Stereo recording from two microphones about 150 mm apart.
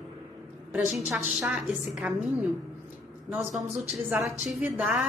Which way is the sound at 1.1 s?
Centre (ahead or behind).